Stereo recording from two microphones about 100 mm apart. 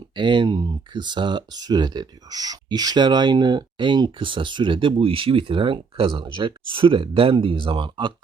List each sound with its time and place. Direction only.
0.2 s speech: 55° right (ahead or behind)